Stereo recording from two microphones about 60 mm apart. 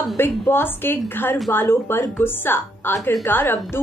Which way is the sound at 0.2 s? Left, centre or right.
Left.